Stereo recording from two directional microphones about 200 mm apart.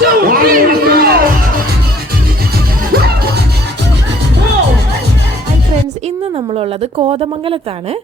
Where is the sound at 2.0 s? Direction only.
50° right (ahead or behind).